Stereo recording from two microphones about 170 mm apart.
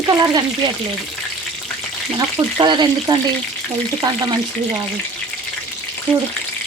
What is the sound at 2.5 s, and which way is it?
Speech, 25° right (ahead or behind).